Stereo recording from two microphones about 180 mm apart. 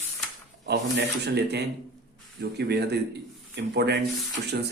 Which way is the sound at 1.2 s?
65° right (ahead or behind).